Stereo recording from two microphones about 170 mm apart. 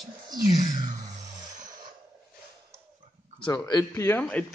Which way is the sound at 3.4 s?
25° left (ahead or behind).